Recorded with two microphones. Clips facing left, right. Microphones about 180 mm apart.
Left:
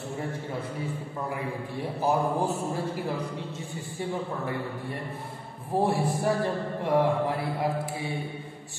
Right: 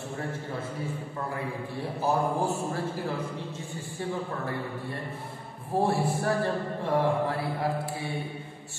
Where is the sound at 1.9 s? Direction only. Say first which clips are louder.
Left 1 dB; 15° left (ahead or behind).